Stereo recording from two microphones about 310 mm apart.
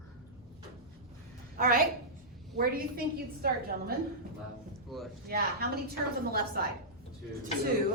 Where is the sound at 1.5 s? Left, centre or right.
Right.